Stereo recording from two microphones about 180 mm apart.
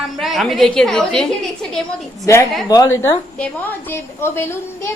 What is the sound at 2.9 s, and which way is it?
A woman's voice, 10° left (ahead or behind).